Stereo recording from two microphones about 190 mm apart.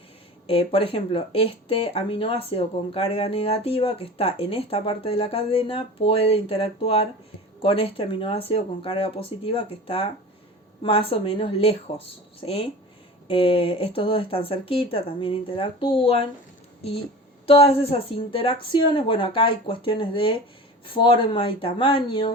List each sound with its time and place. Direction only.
0.4 s speech: 30° left (ahead or behind)
17.4 s speech: 30° left (ahead or behind)